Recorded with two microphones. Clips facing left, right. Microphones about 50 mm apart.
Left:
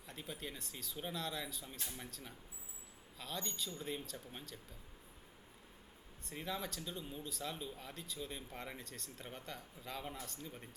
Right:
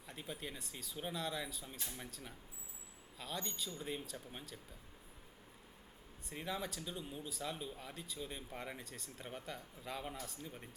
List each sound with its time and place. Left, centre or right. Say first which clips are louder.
0.1 s speech: even; centre
6.2 s speech: even; centre